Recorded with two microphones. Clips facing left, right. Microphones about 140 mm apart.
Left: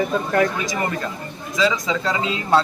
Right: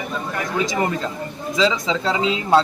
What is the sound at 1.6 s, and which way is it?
A man's voice, 20° right (ahead or behind).